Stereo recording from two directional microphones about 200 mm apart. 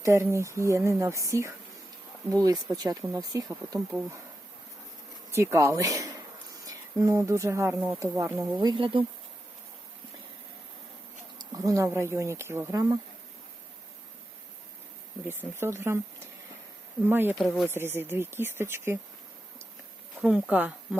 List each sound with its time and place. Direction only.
0.0 s speech: 15° right (ahead or behind)
5.3 s speech: 15° right (ahead or behind)
11.5 s speech: 15° right (ahead or behind)
15.9 s speech: 10° right (ahead or behind)
17.1 s speech: 10° right (ahead or behind)
17.3 s speech: centre (ahead or behind)
17.7 s speech: 10° right (ahead or behind)
20.2 s speech: 5° right (ahead or behind)